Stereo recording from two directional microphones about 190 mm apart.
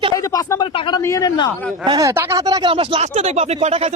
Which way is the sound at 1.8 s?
20° right (ahead or behind).